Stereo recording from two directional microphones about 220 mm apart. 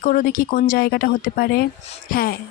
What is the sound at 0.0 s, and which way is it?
A woman's voice, 40° left (ahead or behind).